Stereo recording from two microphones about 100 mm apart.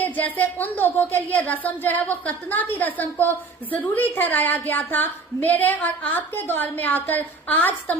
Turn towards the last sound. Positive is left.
turn(degrees=15)  # may be behind; listen again after turning